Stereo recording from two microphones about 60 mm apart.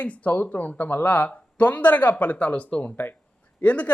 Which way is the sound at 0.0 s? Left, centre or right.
Left.